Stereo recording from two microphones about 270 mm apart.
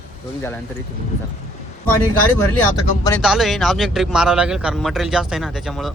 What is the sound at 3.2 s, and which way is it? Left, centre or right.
A man's voice, centre.